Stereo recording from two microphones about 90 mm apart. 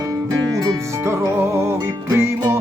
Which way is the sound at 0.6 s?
30° right (ahead or behind).